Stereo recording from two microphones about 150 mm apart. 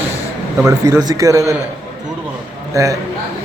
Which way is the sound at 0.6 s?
20° right (ahead or behind).